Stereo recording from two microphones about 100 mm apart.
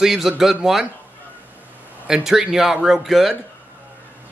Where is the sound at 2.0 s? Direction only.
5° right (ahead or behind).